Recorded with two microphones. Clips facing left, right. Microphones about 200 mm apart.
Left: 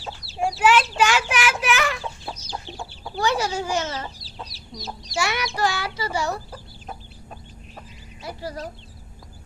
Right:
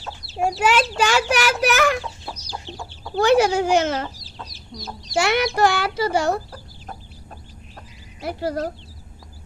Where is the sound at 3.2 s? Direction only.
60° right (ahead or behind).